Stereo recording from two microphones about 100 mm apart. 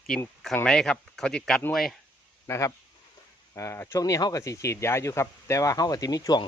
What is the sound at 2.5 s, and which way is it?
Speech, 35° left (ahead or behind).